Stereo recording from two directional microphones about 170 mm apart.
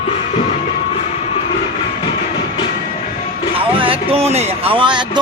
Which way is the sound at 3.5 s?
30° right (ahead or behind).